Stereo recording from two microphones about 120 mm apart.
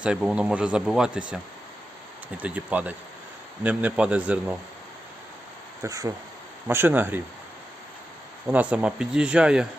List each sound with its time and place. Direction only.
0.0 s speech: 5° right (ahead or behind)
2.4 s speech: 10° right (ahead or behind)
5.8 s speech: 30° right (ahead or behind)
6.7 s speech: 20° right (ahead or behind)
8.4 s speech: 10° right (ahead or behind)